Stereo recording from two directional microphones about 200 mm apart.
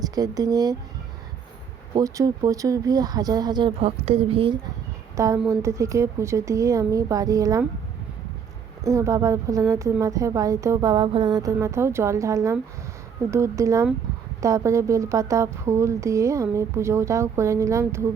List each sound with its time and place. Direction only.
0.0 s speech: 20° right (ahead or behind)
2.0 s speech: 15° right (ahead or behind)
5.1 s a woman's voice: 15° right (ahead or behind)
8.8 s a woman's voice: 15° right (ahead or behind)